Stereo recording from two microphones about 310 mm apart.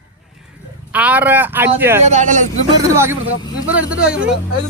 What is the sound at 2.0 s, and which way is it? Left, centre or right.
Speech, right.